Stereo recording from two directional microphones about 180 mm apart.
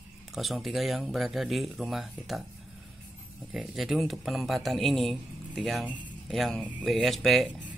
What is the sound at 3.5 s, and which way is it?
Speech, centre (ahead or behind).